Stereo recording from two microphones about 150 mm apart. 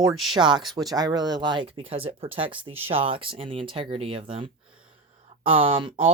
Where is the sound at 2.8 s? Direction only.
35° right (ahead or behind).